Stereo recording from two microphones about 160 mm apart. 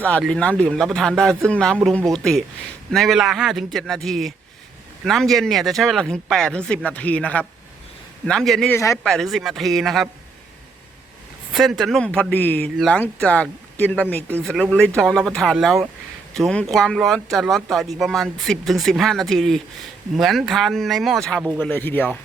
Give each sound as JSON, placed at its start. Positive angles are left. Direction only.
{"t": 0.0, "sound": "speech", "side_deg": 5}
{"t": 8.7, "sound": "speech", "side_deg": 20}
{"t": 9.0, "sound": "speech", "side_deg": 0}
{"t": 11.5, "sound": "speech", "side_deg": 0}